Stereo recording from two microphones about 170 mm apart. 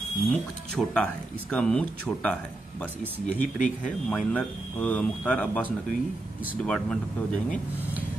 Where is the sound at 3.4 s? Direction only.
50° left (ahead or behind).